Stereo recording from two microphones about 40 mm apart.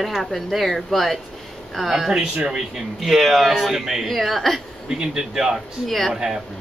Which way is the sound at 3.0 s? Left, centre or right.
Centre.